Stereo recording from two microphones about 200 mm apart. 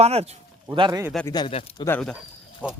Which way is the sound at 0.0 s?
30° right (ahead or behind).